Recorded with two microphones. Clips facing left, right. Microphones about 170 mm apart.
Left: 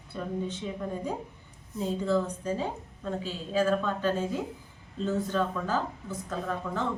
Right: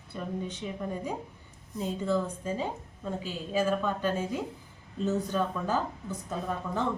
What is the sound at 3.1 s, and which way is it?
Speech, 10° right (ahead or behind).